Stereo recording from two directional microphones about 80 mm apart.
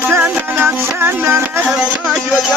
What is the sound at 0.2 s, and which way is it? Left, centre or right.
Music, right.